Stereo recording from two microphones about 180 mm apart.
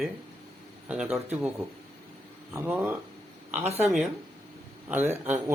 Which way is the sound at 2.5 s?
15° right (ahead or behind).